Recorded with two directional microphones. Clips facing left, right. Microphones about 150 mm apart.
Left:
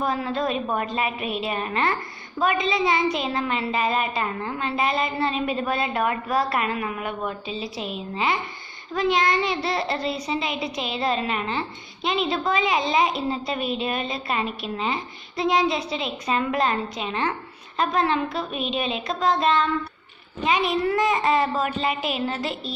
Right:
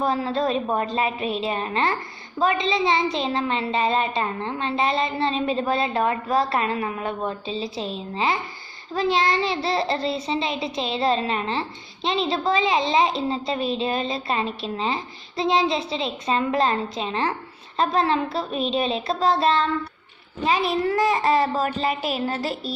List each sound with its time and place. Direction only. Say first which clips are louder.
0.0 s a child's voice: right 2 dB; 30° right (ahead or behind)